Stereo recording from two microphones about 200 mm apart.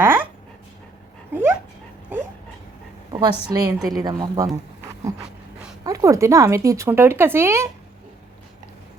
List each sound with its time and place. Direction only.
0.0 s dog: 10° right (ahead or behind)
1.3 s speech: 10° right (ahead or behind)
2.1 s dog: 10° right (ahead or behind)
3.5 s speech: 20° right (ahead or behind)
5.8 s speech: 15° right (ahead or behind)